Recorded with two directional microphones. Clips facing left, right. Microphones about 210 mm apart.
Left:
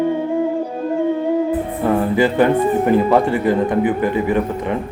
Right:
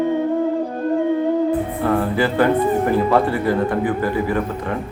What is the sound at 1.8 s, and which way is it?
A man's voice, 15° left (ahead or behind).